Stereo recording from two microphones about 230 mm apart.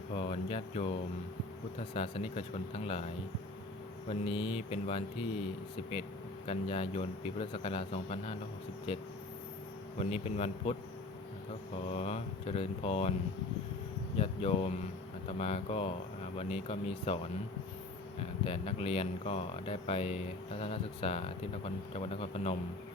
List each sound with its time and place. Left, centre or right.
0.2 s speech: left
4.1 s speech: left
6.5 s speech: left
10.0 s speech: left
11.9 s speech: left
14.2 s speech: left
18.2 s speech: left